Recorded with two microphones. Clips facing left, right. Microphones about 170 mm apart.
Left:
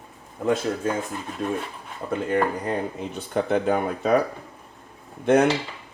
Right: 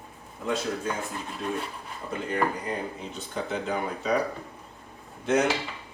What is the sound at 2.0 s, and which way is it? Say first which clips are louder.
Speech: left 5 dB; 55° left (ahead or behind).